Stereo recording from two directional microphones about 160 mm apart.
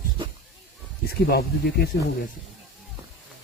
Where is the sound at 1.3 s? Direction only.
75° left (ahead or behind).